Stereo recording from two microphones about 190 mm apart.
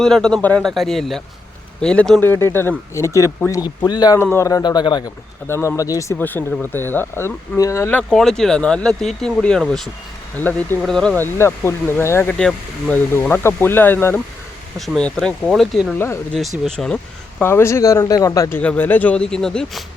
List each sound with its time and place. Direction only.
0.0 s speech: 5° left (ahead or behind)